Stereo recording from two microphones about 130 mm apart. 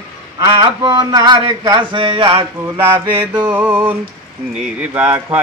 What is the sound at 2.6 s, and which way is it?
Speech, 20° right (ahead or behind).